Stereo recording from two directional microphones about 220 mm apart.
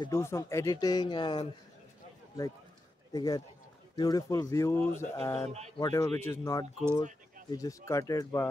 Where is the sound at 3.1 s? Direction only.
20° left (ahead or behind).